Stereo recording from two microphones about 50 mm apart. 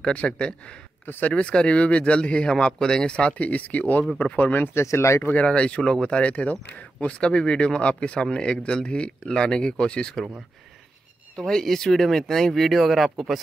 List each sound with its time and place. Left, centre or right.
0.1 s speech: left
1.0 s speech: left
1.3 s speech: centre; by 4.6 s left
4.8 s speech: left
5.3 s speech: left
11.3 s speech: centre